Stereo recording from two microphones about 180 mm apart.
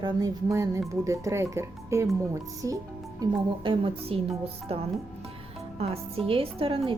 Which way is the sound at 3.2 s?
30° right (ahead or behind).